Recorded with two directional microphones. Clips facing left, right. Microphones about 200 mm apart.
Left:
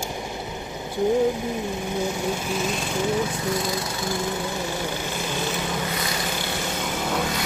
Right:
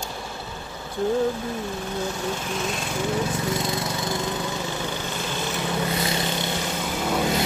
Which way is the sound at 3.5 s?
25° right (ahead or behind).